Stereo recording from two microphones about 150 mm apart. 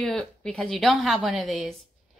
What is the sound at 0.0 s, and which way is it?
A woman's voice, 5° left (ahead or behind).